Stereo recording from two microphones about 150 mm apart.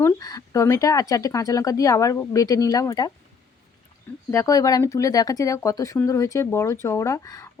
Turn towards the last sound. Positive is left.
turn(degrees=20)  # may be behind; listen again after turning